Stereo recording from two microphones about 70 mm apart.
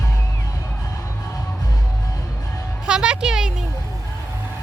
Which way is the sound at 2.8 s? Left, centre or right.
Centre.